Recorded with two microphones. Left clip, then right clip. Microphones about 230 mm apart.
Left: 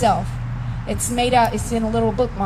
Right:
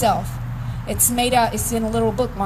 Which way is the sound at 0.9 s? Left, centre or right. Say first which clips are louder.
Even; right.